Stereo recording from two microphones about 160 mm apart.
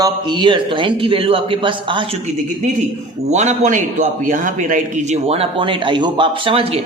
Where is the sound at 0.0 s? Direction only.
30° right (ahead or behind).